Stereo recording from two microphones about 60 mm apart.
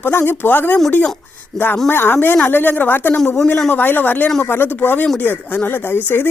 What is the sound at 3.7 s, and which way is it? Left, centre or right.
Speech, left.